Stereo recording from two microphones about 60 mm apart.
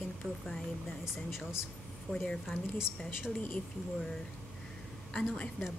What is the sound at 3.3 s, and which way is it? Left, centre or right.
Speech, left.